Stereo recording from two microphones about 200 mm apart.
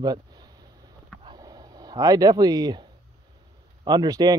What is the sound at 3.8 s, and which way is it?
Speech, 20° right (ahead or behind).